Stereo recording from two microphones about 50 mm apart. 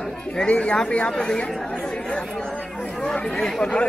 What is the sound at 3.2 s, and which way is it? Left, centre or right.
Speech, centre.